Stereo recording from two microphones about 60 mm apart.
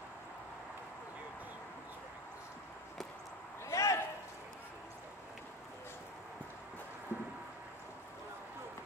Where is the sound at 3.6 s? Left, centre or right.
Left.